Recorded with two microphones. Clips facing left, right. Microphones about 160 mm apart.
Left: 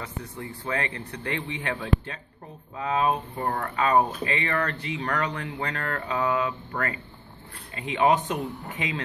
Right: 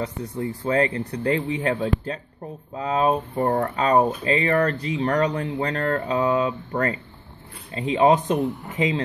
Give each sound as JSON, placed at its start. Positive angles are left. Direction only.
{"t": 0.0, "sound": "speech", "side_deg": -30}